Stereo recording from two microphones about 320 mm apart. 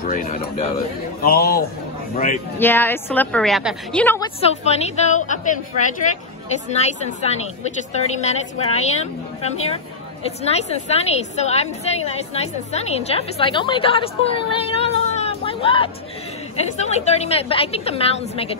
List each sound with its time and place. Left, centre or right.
0.0 s a woman's voice: left
2.6 s a woman's voice: centre
4.4 s a woman's voice: centre